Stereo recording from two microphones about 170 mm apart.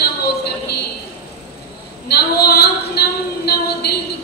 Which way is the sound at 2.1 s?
70° left (ahead or behind).